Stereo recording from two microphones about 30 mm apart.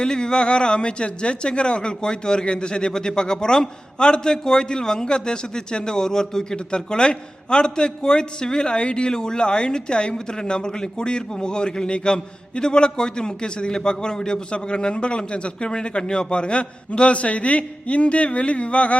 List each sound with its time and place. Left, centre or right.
0.0 s a man's voice: left
6.7 s a man's voice: left